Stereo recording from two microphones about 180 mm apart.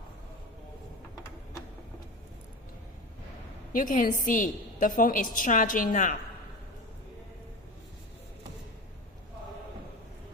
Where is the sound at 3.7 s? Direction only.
50° left (ahead or behind).